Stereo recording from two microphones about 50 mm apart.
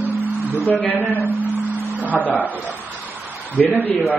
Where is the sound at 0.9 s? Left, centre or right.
Left.